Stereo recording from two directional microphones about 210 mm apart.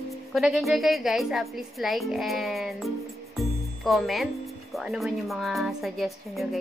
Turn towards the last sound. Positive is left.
turn(degrees=0)  # may be behind; listen again after turning